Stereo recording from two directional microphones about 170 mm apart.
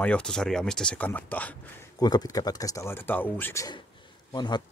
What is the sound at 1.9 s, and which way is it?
Speech, 20° left (ahead or behind).